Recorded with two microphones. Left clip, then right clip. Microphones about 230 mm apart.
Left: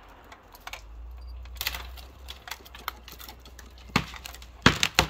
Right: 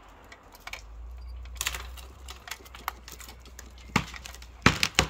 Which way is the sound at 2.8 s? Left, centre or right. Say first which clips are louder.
Right 1 dB; right.